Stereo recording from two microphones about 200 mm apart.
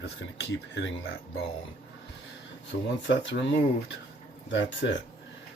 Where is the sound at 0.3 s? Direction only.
70° left (ahead or behind).